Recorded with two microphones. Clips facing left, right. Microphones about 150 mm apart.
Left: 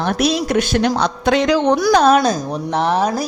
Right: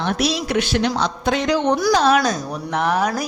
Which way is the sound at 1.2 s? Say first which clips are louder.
Left 4 dB; 85° left.